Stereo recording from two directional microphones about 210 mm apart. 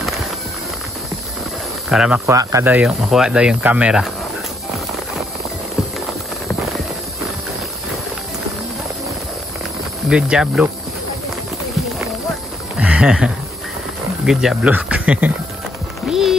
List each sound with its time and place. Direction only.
1.9 s speech: 5° right (ahead or behind)
10.0 s speech: 5° right (ahead or behind)
12.7 s a sound: 5° right (ahead or behind)
14.2 s speech: centre (ahead or behind)
16.1 s music: centre (ahead or behind)